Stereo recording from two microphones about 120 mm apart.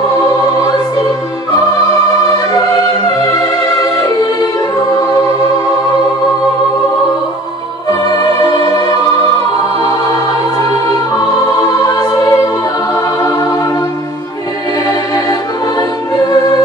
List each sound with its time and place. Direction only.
0.6 s music: 30° left (ahead or behind)
2.1 s music: 30° left (ahead or behind)
4.0 s music: 30° left (ahead or behind)
8.4 s music: 35° left (ahead or behind)
10.9 s music: 35° left (ahead or behind)
14.9 s music: 35° left (ahead or behind)